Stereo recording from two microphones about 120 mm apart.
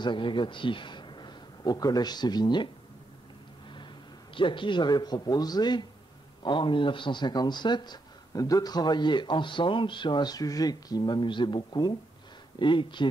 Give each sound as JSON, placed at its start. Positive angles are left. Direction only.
{"t": 0.0, "sound": "a man's voice", "side_deg": 40}
{"t": 4.4, "sound": "a man's voice", "side_deg": 45}